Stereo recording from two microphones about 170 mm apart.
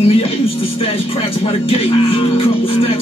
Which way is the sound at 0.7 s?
35° left (ahead or behind).